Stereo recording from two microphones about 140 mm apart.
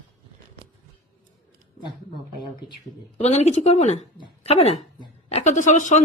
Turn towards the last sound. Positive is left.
turn(degrees=60)  # may be behind; listen again after turning